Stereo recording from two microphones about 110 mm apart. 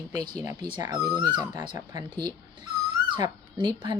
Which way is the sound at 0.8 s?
35° right (ahead or behind).